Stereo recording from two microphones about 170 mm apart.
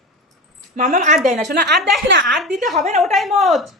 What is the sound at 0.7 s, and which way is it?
Speech, 50° right (ahead or behind).